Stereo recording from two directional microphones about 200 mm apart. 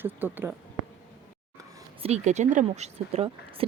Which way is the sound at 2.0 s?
35° right (ahead or behind).